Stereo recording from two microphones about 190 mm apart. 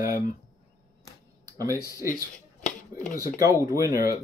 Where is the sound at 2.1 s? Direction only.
45° left (ahead or behind).